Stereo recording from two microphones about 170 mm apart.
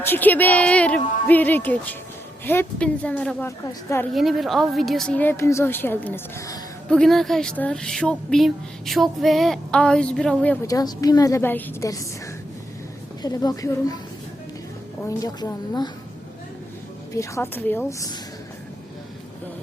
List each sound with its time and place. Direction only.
0.0 s a woman's voice: 10° left (ahead or behind)
3.7 s a woman's voice: 15° left (ahead or behind)
4.1 s a woman's voice: centre (ahead or behind); by 6.6 s 15° left (ahead or behind)
6.9 s a woman's voice: 5° left (ahead or behind)
10.7 s a woman's voice: 20° left (ahead or behind)
13.2 s a woman's voice: 20° left (ahead or behind)
15.2 s a woman's voice: 20° left (ahead or behind)
17.2 s a woman's voice: 15° left (ahead or behind)